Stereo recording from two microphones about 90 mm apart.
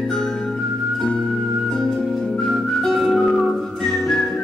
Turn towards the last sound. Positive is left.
turn(degrees=5)  # may be behind; listen again after turning